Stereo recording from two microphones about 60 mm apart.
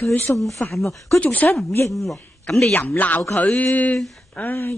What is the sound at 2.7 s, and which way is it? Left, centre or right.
Speech, left.